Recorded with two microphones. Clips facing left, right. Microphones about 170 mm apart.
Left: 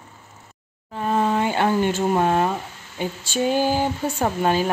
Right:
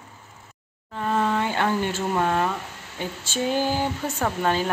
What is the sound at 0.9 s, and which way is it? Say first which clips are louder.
Speech: left 2 dB; 15° left (ahead or behind).